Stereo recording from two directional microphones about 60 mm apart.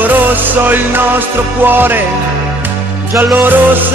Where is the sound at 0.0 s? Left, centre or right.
Right.